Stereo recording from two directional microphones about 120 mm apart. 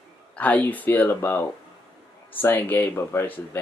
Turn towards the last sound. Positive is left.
turn(degrees=20)  # may be behind; listen again after turning